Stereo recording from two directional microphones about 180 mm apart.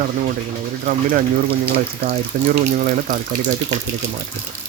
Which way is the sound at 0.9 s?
50° right (ahead or behind).